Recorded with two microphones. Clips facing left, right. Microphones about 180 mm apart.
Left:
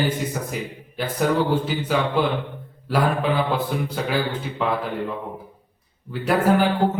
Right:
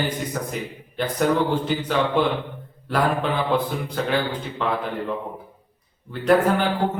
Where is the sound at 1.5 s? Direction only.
5° left (ahead or behind).